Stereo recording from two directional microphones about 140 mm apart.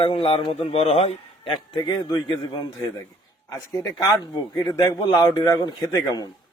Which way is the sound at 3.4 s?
25° left (ahead or behind).